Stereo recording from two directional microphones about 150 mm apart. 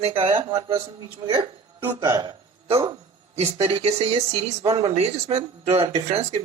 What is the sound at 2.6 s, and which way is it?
Speech, 40° right (ahead or behind).